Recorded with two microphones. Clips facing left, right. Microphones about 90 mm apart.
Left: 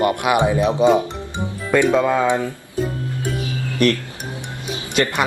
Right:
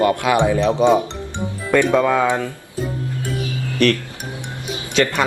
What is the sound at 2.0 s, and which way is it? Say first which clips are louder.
Speech: right 1 dB; 15° left (ahead or behind).